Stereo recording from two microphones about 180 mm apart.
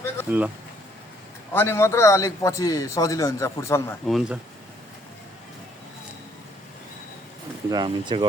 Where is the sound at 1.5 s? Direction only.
10° left (ahead or behind).